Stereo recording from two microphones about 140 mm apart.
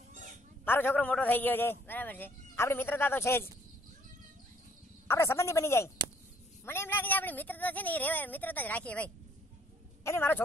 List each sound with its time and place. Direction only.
0.7 s a man's voice: 15° left (ahead or behind)
5.0 s a man's voice: 20° left (ahead or behind)